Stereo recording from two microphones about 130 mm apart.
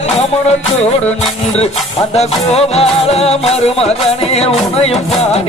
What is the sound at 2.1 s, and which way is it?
Music, 55° left (ahead or behind).